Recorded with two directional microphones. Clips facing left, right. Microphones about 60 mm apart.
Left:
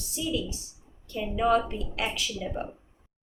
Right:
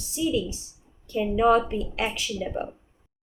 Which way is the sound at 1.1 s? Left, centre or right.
Right.